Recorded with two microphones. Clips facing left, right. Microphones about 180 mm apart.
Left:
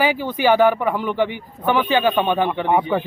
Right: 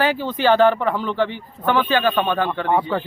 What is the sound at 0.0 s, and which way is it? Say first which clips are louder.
Speech: left 1 dB; 10° left (ahead or behind).